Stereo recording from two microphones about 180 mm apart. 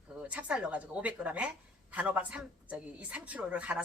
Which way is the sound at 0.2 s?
5° right (ahead or behind).